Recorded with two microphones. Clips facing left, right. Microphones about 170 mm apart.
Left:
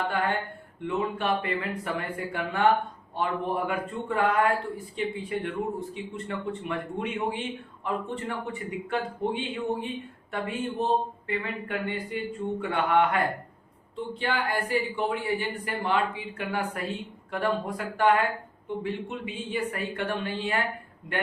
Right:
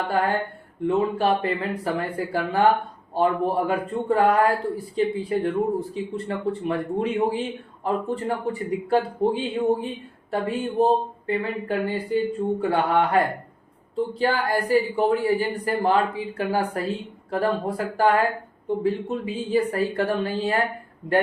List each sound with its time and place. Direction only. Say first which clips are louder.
0.8 s speech: right 7 dB; 35° right (ahead or behind)